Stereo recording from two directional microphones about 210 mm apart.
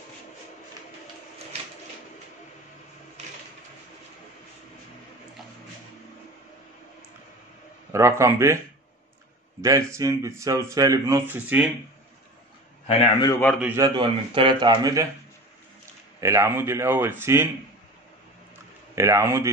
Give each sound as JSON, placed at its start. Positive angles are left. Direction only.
{"t": 7.9, "sound": "speech", "side_deg": -15}
{"t": 9.6, "sound": "speech", "side_deg": -15}
{"t": 12.8, "sound": "a man's voice", "side_deg": 20}
{"t": 13.6, "sound": "speech", "side_deg": -10}
{"t": 16.2, "sound": "speech", "side_deg": -15}
{"t": 18.9, "sound": "speech", "side_deg": -15}